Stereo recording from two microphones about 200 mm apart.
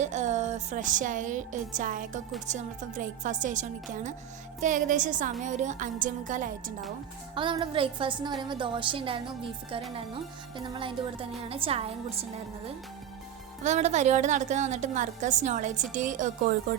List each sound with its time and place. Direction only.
0.0 s a woman's voice: 35° right (ahead or behind)
7.3 s a woman's voice: 25° right (ahead or behind)
13.7 s a woman's voice: 35° right (ahead or behind)